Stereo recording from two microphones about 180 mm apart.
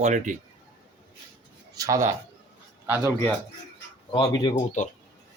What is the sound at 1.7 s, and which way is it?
A man's voice, 20° right (ahead or behind).